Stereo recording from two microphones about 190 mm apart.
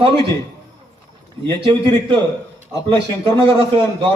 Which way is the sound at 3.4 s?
30° right (ahead or behind).